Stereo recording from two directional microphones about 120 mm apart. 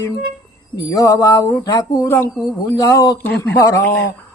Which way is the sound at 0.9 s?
35° left (ahead or behind).